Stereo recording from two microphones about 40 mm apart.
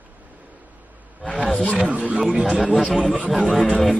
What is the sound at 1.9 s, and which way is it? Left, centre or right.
Speech, right.